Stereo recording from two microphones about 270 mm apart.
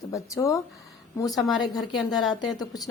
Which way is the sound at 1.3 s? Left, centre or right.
Centre.